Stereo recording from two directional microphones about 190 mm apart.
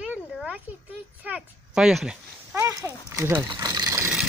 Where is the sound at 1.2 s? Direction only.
5° right (ahead or behind).